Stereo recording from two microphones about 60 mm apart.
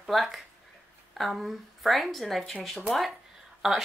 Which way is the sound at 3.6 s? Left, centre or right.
Centre.